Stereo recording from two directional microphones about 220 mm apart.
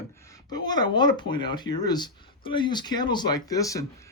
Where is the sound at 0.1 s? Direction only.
15° left (ahead or behind).